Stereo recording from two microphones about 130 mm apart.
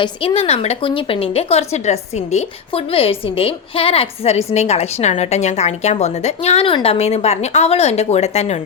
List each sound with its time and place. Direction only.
0.0 s a woman's voice: 40° left (ahead or behind)